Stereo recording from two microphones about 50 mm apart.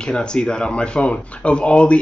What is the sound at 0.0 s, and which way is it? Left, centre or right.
Speech, centre.